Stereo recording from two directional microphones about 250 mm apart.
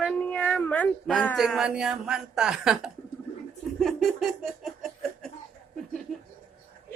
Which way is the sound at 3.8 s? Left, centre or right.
Centre.